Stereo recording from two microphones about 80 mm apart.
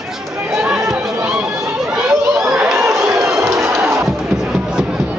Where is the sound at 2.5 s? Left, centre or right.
Centre.